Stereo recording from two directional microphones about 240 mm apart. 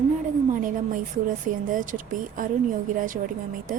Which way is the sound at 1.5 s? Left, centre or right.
Right.